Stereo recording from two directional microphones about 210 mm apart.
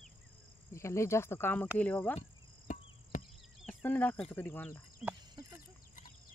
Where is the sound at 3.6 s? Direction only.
5° left (ahead or behind).